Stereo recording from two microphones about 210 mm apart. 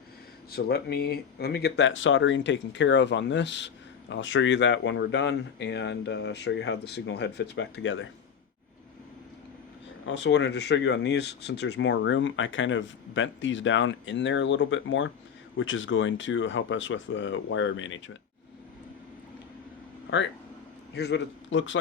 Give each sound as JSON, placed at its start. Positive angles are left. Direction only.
{"t": 0.5, "sound": "speech", "side_deg": 50}
{"t": 10.1, "sound": "speech", "side_deg": 55}
{"t": 20.1, "sound": "a man's voice", "side_deg": 55}